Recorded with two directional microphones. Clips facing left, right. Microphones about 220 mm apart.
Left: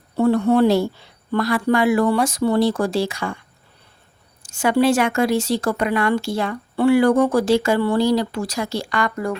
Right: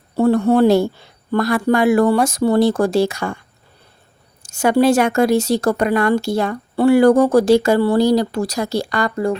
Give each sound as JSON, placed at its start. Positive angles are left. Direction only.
{"t": 0.2, "sound": "speech", "side_deg": -40}
{"t": 4.4, "sound": "speech", "side_deg": -40}